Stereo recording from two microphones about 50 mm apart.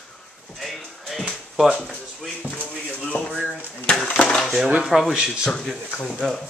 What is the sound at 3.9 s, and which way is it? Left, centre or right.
Dishes, centre.